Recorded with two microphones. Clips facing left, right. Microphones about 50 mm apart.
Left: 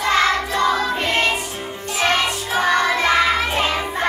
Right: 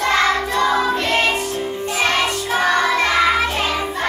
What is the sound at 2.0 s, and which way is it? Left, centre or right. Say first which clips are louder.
Music: left 1 dB; centre.